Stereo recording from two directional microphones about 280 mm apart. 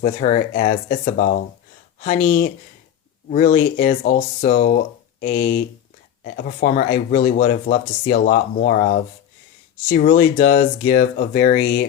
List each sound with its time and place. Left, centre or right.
0.0 s speech: left